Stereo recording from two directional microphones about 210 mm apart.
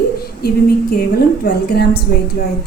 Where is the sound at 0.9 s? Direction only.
45° left (ahead or behind).